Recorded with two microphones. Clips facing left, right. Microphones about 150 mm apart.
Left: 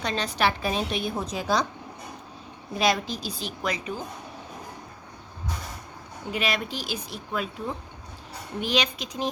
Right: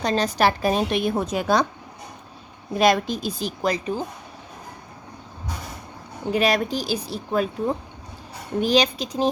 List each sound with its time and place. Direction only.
0.0 s a woman's voice: 40° right (ahead or behind); by 1.6 s 55° right (ahead or behind)
2.7 s a woman's voice: 50° right (ahead or behind); by 4.0 s 35° right (ahead or behind)
6.3 s speech: 40° right (ahead or behind)
8.6 s speech: 35° right (ahead or behind)